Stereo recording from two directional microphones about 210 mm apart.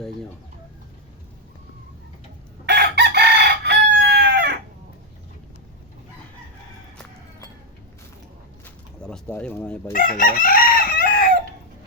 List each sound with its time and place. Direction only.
2.6 s chicken: 50° right (ahead or behind)
9.0 s speech: 5° left (ahead or behind)
9.9 s chicken: 40° left (ahead or behind)